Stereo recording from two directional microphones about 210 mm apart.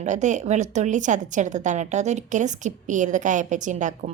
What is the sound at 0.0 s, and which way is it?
A woman's voice, 35° right (ahead or behind).